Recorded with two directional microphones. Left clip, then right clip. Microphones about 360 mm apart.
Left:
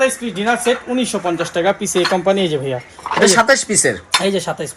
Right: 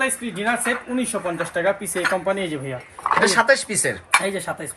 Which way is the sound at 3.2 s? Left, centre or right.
Centre.